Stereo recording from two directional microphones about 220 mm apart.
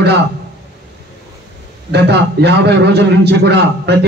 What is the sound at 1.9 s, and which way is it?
A man's voice, 50° right (ahead or behind).